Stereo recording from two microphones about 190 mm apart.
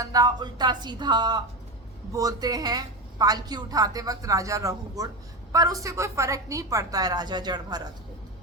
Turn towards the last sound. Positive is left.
turn(degrees=-20)  # may be behind; listen again after turning